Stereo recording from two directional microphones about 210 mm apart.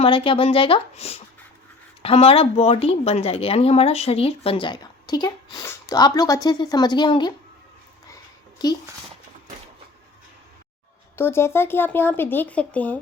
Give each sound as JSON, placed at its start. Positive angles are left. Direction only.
{"t": 0.0, "sound": "a woman's voice", "side_deg": 25}
{"t": 8.1, "sound": "a sound", "side_deg": 20}
{"t": 11.2, "sound": "speech", "side_deg": 10}